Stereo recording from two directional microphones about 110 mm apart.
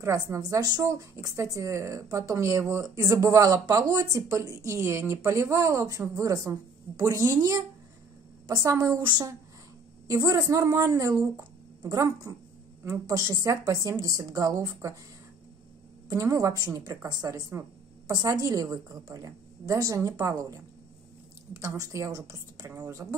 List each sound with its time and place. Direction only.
0.3 s a woman's voice: 30° right (ahead or behind)
16.1 s a woman's voice: 30° right (ahead or behind)
17.5 s a sound: 25° right (ahead or behind)
18.1 s a woman's voice: 35° right (ahead or behind)